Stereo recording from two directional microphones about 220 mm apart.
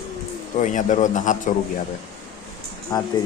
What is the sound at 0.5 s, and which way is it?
A man's voice, 35° left (ahead or behind).